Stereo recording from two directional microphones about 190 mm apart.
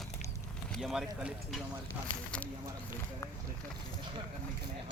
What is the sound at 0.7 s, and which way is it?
Speech, centre (ahead or behind).